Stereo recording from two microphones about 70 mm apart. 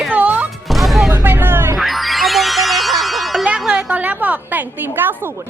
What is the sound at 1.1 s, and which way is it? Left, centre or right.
Vehicle, right.